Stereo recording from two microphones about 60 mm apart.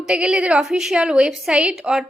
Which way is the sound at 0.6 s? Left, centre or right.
Centre.